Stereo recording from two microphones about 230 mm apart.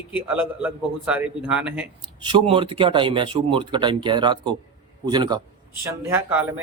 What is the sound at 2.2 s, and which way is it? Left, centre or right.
A man's voice, right.